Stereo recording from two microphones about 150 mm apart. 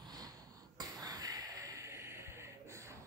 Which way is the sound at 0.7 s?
25° right (ahead or behind).